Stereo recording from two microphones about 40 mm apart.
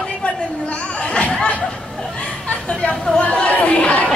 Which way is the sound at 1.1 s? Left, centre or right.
Left.